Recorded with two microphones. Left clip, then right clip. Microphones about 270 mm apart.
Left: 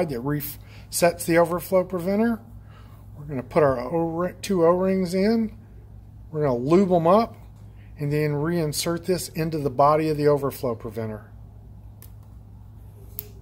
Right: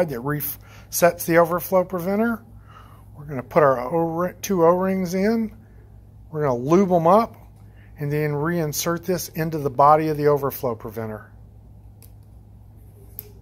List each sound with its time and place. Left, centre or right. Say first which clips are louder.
0.0 s speech: right 3 dB; centre